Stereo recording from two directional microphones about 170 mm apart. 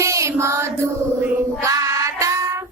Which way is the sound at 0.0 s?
15° right (ahead or behind).